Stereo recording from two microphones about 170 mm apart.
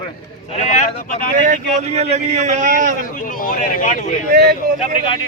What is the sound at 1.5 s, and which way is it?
A man's voice, 40° right (ahead or behind).